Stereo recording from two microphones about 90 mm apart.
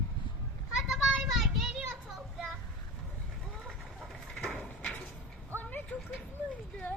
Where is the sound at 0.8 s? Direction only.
5° right (ahead or behind).